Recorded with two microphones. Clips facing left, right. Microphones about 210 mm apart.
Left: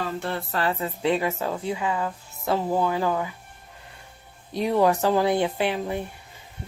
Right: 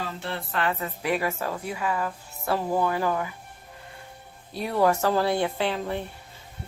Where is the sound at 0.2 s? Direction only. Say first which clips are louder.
Left 2 dB; 40° left (ahead or behind); by 3.2 s 15° left (ahead or behind).